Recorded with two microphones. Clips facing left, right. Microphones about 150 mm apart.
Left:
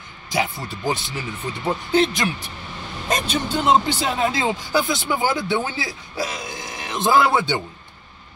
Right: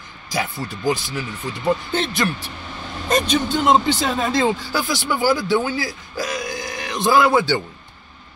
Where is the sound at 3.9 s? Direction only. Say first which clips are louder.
Right 2 dB; 10° left (ahead or behind).